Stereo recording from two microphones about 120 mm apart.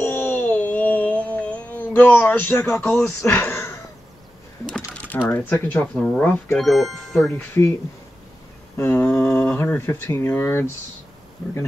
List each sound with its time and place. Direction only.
0.0 s a sound: 15° left (ahead or behind)
4.6 s typing: 10° left (ahead or behind)
5.3 s speech: 15° left (ahead or behind)
6.6 s speech: centre (ahead or behind)
7.6 s speech: 20° left (ahead or behind)
8.7 s speech: 20° left (ahead or behind)